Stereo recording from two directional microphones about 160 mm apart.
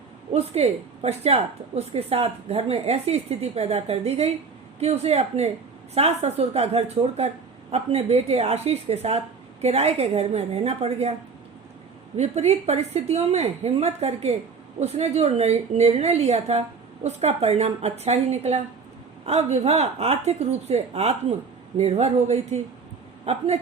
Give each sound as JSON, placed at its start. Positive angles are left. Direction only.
{"t": 0.3, "sound": "a woman's voice", "side_deg": -40}
{"t": 12.1, "sound": "a woman's voice", "side_deg": -45}